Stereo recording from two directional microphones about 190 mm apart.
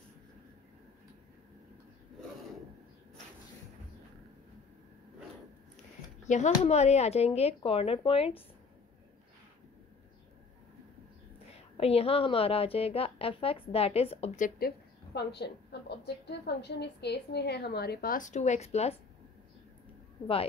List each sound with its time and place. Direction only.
6.2 s a woman's voice: 40° left (ahead or behind)
11.7 s a woman's voice: 30° left (ahead or behind)
15.1 s a woman's voice: 60° left (ahead or behind)
15.7 s a sound: 60° left (ahead or behind)
16.3 s a woman's voice: 60° left (ahead or behind); by 18.9 s 35° left (ahead or behind)